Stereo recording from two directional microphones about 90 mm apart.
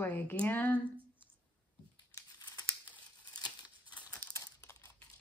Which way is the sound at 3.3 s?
50° left (ahead or behind).